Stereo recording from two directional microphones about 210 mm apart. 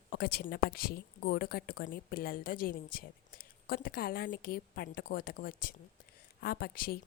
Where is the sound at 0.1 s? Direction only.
50° left (ahead or behind).